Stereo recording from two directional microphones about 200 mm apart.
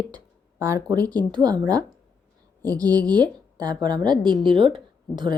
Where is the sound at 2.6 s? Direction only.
20° right (ahead or behind).